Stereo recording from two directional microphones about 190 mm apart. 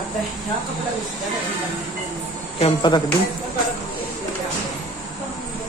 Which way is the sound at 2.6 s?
25° left (ahead or behind).